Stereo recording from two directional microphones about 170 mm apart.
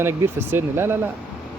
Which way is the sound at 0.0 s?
15° right (ahead or behind).